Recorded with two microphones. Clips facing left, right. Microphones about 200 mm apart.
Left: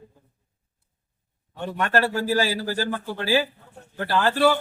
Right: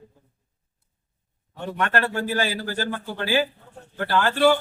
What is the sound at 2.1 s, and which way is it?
Speech, 35° left (ahead or behind).